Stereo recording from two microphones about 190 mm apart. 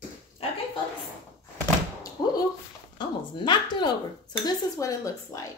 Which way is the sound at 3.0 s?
25° left (ahead or behind).